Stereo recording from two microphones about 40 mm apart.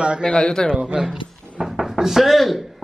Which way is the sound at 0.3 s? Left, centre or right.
Left.